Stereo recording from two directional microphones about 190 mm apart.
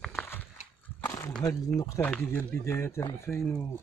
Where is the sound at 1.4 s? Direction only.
20° left (ahead or behind).